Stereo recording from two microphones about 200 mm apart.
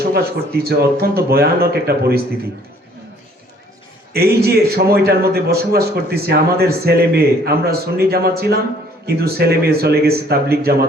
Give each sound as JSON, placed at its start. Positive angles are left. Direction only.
{"t": 0.0, "sound": "a man's voice", "side_deg": -50}
{"t": 4.1, "sound": "a man's voice", "side_deg": -50}